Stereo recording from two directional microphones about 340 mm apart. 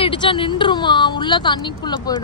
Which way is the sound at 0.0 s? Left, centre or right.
Centre.